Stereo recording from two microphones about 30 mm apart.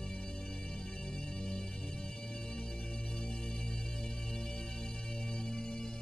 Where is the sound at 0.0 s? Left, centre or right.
Left.